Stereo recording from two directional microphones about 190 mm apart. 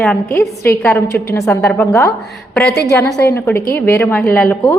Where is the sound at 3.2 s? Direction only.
10° left (ahead or behind).